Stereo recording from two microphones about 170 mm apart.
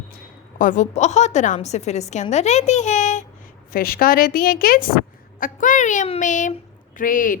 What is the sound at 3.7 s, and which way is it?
A woman's voice, 60° left (ahead or behind).